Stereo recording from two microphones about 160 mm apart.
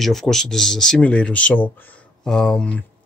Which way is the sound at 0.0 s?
Centre (ahead or behind).